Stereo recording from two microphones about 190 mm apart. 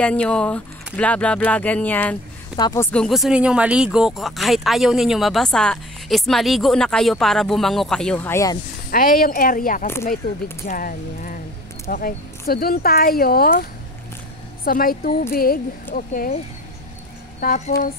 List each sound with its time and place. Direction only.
0.0 s speech: 5° left (ahead or behind)
2.5 s speech: 20° left (ahead or behind)
2.9 s speech: centre (ahead or behind)
8.9 s speech: 50° left (ahead or behind)
17.4 s speech: 45° left (ahead or behind)